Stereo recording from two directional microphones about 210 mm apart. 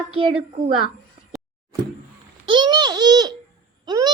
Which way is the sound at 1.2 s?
30° right (ahead or behind).